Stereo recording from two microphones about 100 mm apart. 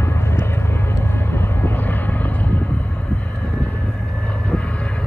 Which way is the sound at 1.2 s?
20° left (ahead or behind).